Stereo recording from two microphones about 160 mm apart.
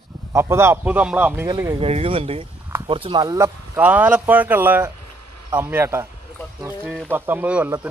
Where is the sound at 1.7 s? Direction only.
35° right (ahead or behind); by 6.0 s 15° right (ahead or behind).